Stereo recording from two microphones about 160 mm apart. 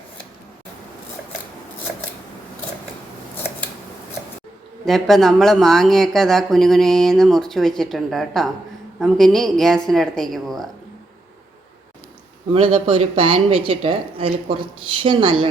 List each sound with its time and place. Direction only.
4.9 s speech: centre (ahead or behind)
12.5 s speech: 35° right (ahead or behind)